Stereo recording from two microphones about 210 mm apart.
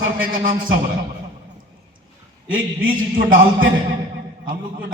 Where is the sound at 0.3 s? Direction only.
40° right (ahead or behind).